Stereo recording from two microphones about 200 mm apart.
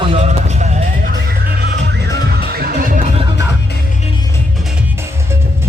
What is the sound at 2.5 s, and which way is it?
Music, 45° right (ahead or behind).